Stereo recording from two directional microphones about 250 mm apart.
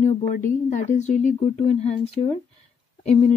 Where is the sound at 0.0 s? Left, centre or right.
Left.